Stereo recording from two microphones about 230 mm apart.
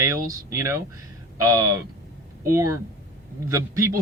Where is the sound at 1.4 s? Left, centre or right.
Centre.